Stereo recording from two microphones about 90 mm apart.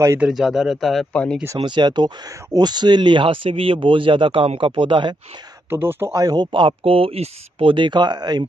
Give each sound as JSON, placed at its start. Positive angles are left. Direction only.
{"t": 0.3, "sound": "speech", "side_deg": -5}
{"t": 1.1, "sound": "speech", "side_deg": 15}
{"t": 1.6, "sound": "speech", "side_deg": -55}
{"t": 5.7, "sound": "a man's voice", "side_deg": -25}
{"t": 6.1, "sound": "speech", "side_deg": -50}
{"t": 7.6, "sound": "speech", "side_deg": -65}